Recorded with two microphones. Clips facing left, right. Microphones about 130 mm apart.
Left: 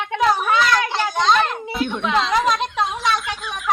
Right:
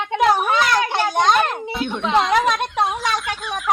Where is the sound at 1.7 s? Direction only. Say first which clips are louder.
Right 1 dB; centre (ahead or behind).